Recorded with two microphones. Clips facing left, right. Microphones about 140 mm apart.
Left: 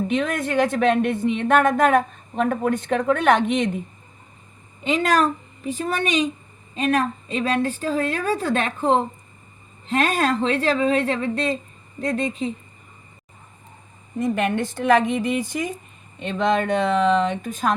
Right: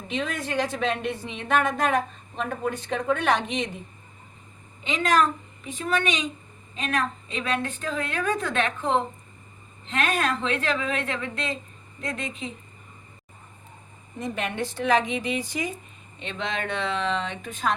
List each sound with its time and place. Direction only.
0.1 s speech: 55° left (ahead or behind)
4.8 s a woman's voice: 45° left (ahead or behind)
14.2 s speech: 50° left (ahead or behind)